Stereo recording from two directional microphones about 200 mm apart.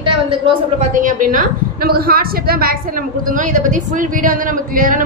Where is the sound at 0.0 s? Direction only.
25° right (ahead or behind).